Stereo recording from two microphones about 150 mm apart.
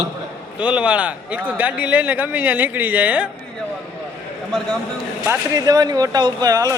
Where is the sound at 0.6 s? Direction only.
10° right (ahead or behind).